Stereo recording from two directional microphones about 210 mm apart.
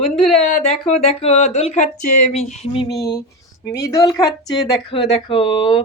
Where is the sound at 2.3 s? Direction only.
30° left (ahead or behind); by 3.2 s 15° left (ahead or behind).